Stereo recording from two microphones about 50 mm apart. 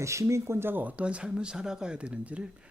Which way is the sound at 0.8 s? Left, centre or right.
Right.